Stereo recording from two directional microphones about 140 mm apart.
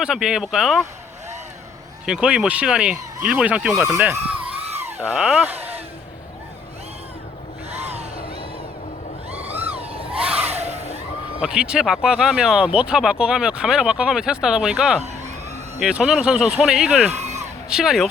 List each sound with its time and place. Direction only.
0.0 s speech: 5° right (ahead or behind)
2.0 s speech: 5° right (ahead or behind)
4.1 s a sound: 10° right (ahead or behind)
5.1 s speech: 10° right (ahead or behind)
7.8 s a sound: 50° right (ahead or behind)
10.2 s a sound: 10° right (ahead or behind)
11.3 s speech: 5° right (ahead or behind)
17.1 s speech: 50° right (ahead or behind)
17.7 s speech: 5° right (ahead or behind)